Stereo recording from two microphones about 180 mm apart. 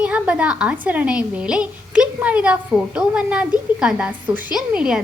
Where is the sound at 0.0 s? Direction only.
5° right (ahead or behind).